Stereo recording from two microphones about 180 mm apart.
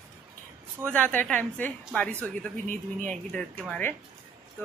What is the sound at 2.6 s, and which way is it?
Speech, 45° right (ahead or behind).